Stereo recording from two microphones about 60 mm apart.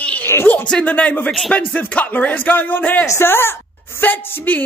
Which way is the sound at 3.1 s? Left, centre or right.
Left.